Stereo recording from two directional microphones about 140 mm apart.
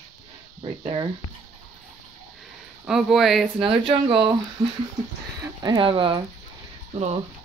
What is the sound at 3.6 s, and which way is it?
Speech, 40° right (ahead or behind).